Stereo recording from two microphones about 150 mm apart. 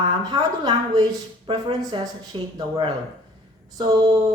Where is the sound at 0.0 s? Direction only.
30° right (ahead or behind).